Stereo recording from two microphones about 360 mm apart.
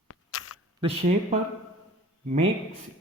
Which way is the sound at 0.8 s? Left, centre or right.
Centre.